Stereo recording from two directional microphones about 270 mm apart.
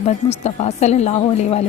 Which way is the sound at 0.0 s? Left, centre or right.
Left.